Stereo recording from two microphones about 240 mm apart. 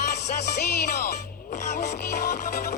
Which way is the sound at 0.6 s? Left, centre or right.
Left.